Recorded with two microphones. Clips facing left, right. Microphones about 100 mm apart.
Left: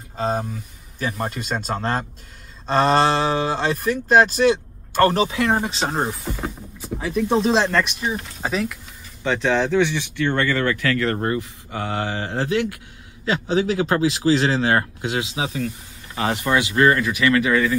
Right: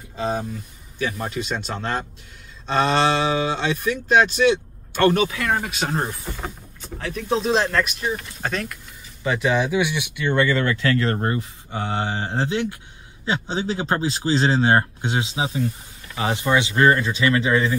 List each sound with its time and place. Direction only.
0.2 s a man's voice: 50° left (ahead or behind); by 6.0 s 30° left (ahead or behind)
6.4 s speech: 5° left (ahead or behind)
9.2 s speech: 5° right (ahead or behind); by 17.7 s 25° right (ahead or behind)